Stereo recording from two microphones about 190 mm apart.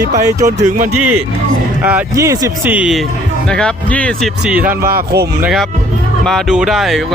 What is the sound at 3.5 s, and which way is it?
Speech, 5° left (ahead or behind).